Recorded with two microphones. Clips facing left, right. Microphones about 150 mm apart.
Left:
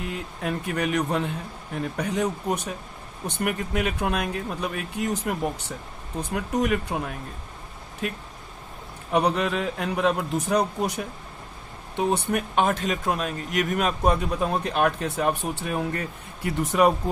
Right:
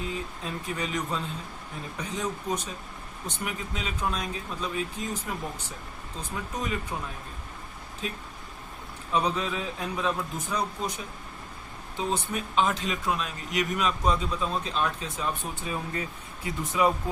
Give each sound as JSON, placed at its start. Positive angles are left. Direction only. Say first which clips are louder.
{"t": 0.1, "sound": "a man's voice", "louder": "left 5 dB", "side_deg": 65}